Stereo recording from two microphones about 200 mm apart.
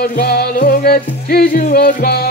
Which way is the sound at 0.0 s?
50° left (ahead or behind).